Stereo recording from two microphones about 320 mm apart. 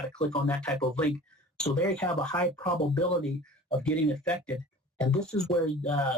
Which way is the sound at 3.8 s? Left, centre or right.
Centre.